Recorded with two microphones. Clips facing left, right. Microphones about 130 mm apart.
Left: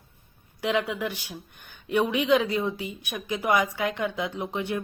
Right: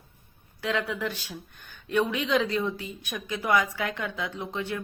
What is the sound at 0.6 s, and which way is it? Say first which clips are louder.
A woman's voice: left 3 dB; 15° left (ahead or behind).